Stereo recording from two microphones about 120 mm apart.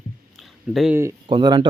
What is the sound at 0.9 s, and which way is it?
Speech, 20° right (ahead or behind).